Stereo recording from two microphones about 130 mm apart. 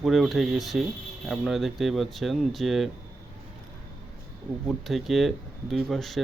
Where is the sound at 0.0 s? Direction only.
Centre (ahead or behind).